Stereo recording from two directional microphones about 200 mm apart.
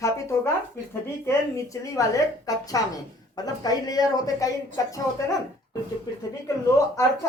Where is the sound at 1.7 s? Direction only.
15° left (ahead or behind).